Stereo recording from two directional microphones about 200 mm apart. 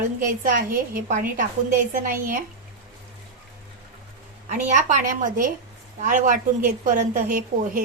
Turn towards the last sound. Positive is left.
turn(degrees=-45)  # may be behind; listen again after turning